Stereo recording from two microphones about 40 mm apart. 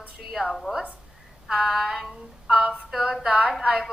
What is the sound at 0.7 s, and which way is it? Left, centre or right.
Speech, right.